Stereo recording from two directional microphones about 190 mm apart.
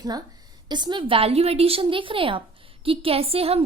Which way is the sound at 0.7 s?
25° right (ahead or behind).